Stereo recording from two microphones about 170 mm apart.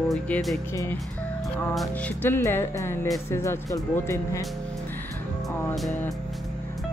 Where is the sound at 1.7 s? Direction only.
5° left (ahead or behind).